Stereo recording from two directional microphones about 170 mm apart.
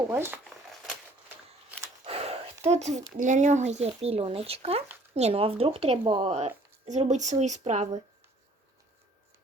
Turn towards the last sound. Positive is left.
turn(degrees=-45)  # may be behind; listen again after turning